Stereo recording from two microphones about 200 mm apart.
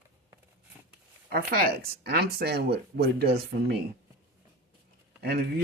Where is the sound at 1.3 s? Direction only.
50° right (ahead or behind).